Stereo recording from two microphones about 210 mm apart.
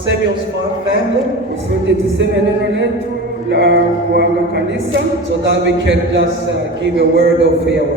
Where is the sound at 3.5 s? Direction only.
50° right (ahead or behind).